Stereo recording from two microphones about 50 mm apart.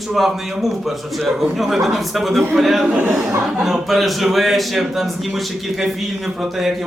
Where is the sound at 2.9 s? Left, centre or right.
Right.